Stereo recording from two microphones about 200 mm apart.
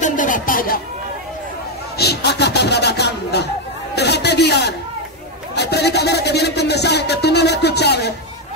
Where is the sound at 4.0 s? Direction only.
55° left (ahead or behind).